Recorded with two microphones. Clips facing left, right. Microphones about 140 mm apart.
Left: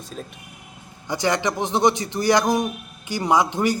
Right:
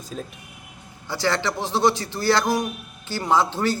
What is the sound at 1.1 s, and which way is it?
A man's voice, 15° left (ahead or behind).